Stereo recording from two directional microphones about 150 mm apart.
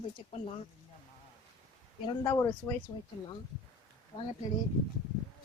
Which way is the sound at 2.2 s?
15° left (ahead or behind).